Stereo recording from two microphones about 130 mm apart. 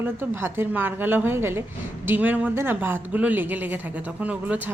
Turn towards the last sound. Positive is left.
turn(degrees=-10)  # may be behind; listen again after turning